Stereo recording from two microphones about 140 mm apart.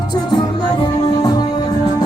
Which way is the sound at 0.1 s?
30° left (ahead or behind).